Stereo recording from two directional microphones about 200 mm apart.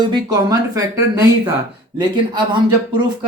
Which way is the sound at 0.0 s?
20° right (ahead or behind).